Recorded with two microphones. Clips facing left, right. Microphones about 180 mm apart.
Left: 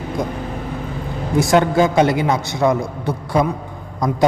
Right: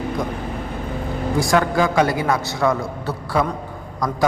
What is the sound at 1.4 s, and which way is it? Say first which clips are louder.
A man's voice: left 4 dB; 25° left (ahead or behind).